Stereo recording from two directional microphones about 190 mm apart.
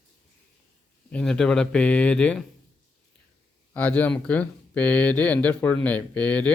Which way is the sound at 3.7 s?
5° left (ahead or behind).